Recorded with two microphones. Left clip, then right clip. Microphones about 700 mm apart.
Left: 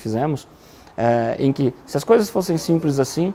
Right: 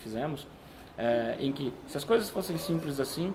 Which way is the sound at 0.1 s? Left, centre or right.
Left.